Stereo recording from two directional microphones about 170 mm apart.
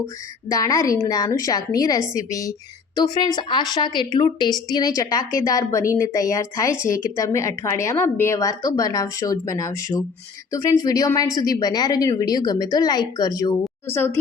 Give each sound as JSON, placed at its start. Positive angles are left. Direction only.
{"t": 0.4, "sound": "a woman's voice", "side_deg": 20}